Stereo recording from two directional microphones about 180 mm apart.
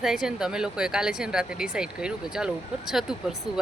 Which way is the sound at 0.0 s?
5° right (ahead or behind).